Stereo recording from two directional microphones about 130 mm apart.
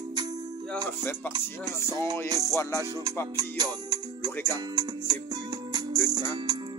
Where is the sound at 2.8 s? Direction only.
25° right (ahead or behind).